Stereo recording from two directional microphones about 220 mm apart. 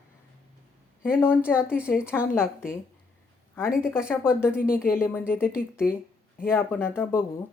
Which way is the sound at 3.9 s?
5° right (ahead or behind).